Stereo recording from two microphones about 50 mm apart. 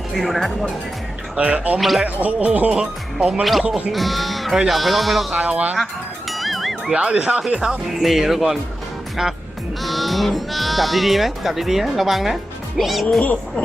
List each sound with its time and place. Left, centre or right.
0.1 s speech: centre
1.4 s speech: right
1.8 s speech: centre
2.0 s speech: right
3.9 s speech: centre
5.3 s speech: right
6.3 s music: centre
6.9 s speech: right
7.6 s speech: centre
9.2 s music: centre
9.8 s speech: centre